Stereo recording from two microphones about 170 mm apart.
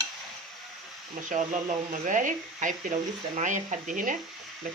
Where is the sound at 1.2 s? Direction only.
45° right (ahead or behind).